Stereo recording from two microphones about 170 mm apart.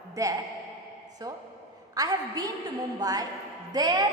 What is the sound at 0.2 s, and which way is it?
Speech, 20° right (ahead or behind).